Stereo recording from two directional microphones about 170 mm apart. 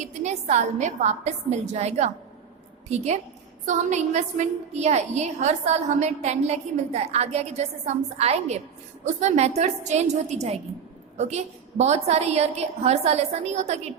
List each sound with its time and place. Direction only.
0.0 s a woman's voice: 45° right (ahead or behind)